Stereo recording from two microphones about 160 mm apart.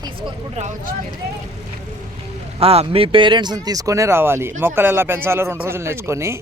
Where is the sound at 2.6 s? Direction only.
35° right (ahead or behind).